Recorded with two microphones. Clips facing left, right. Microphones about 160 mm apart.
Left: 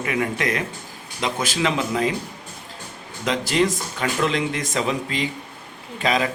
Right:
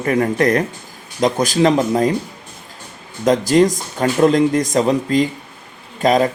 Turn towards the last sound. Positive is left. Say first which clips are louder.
# right 7 dB
turn(degrees=-40)  # may be behind; listen again after turning